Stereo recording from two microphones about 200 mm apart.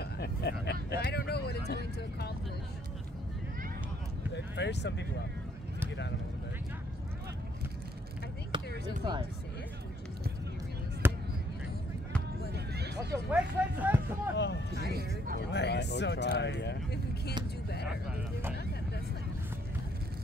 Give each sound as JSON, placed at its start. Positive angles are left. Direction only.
{"t": 0.0, "sound": "vehicle", "side_deg": 55}
{"t": 4.3, "sound": "speech", "side_deg": 60}
{"t": 8.5, "sound": "basketball bounce", "side_deg": -25}
{"t": 11.0, "sound": "basketball bounce", "side_deg": -10}
{"t": 12.5, "sound": "a sound", "side_deg": -55}
{"t": 13.3, "sound": "speech", "side_deg": -10}
{"t": 14.3, "sound": "speech", "side_deg": 60}
{"t": 14.8, "sound": "speech", "side_deg": -50}
{"t": 15.5, "sound": "speech", "side_deg": 60}